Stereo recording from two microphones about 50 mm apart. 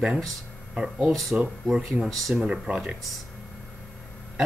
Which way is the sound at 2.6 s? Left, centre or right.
Centre.